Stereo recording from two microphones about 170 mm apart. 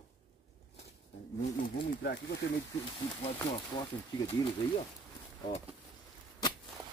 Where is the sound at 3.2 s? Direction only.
30° left (ahead or behind).